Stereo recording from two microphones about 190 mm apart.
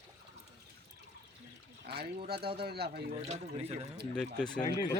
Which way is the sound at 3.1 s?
35° right (ahead or behind).